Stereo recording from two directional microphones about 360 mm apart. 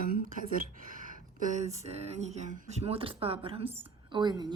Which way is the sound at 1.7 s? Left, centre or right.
Centre.